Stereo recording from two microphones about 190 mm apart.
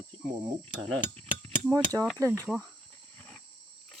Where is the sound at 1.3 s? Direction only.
15° right (ahead or behind).